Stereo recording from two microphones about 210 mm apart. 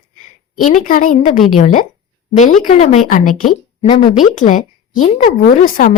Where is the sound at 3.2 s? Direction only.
90° left.